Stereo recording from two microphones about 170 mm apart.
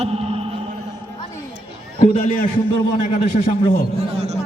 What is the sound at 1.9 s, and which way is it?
Speech, 35° left (ahead or behind).